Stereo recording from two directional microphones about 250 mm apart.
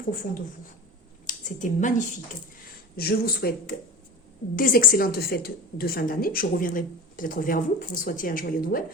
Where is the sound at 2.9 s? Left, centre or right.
Left.